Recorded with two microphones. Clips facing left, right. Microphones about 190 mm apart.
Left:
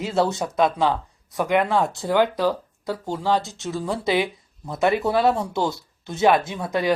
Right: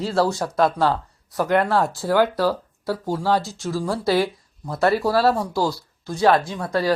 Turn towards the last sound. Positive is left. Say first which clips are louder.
# right 1 dB
turn(degrees=20)  # may be behind; listen again after turning